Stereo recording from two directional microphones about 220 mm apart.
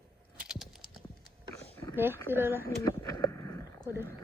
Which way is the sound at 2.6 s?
15° left (ahead or behind).